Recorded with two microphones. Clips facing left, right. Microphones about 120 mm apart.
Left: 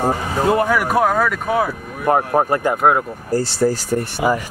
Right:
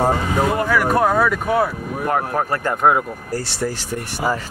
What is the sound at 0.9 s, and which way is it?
Speech, centre (ahead or behind).